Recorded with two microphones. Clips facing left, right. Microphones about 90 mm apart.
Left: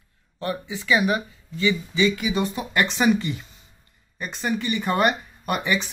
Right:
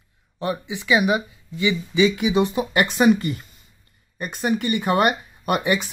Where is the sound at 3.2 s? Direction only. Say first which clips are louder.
Right 2 dB; 50° right (ahead or behind).